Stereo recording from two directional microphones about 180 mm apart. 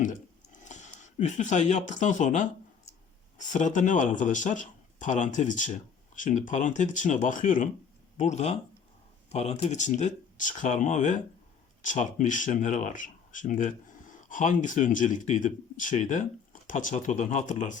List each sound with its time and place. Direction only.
0.6 s speech: 40° left (ahead or behind)